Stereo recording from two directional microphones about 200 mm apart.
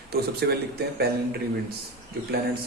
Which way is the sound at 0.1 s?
50° right (ahead or behind).